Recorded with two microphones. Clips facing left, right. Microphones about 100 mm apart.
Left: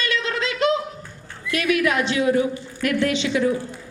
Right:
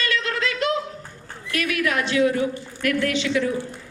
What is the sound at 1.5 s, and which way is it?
A woman's voice, 20° left (ahead or behind).